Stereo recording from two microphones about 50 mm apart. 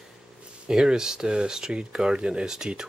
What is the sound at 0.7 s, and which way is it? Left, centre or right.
Speech, centre.